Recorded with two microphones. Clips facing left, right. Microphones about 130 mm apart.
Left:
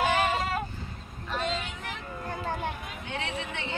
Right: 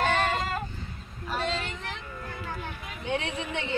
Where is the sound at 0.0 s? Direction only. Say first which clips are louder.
Even; 5° left (ahead or behind).